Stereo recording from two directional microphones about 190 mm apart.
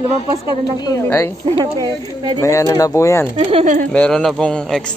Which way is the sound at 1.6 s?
25° right (ahead or behind).